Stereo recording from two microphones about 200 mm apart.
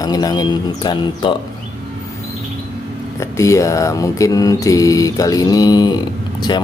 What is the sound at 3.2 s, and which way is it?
Mantra, 15° left (ahead or behind).